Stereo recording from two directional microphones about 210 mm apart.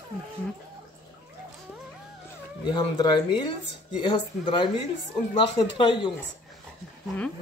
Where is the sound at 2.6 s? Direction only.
20° left (ahead or behind).